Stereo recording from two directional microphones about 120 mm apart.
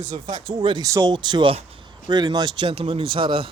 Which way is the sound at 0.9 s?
30° right (ahead or behind).